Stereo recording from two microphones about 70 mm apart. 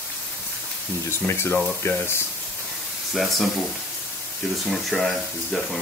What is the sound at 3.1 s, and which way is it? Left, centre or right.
Speech, centre.